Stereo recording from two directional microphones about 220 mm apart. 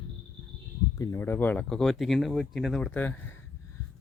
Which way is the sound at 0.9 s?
15° left (ahead or behind).